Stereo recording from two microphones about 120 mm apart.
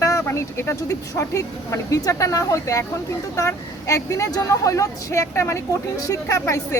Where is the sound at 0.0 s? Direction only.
25° left (ahead or behind).